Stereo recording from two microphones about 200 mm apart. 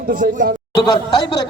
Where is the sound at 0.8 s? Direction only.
20° left (ahead or behind).